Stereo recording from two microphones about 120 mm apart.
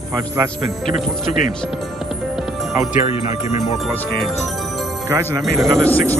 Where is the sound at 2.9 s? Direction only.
70° left (ahead or behind).